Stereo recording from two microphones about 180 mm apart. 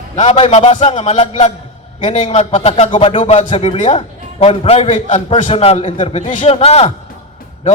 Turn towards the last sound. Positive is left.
turn(degrees=35)  # may be behind; listen again after turning